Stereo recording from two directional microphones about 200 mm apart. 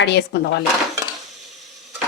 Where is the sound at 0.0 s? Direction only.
60° left (ahead or behind).